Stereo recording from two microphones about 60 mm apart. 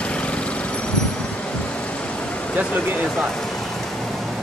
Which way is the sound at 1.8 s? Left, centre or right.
Centre.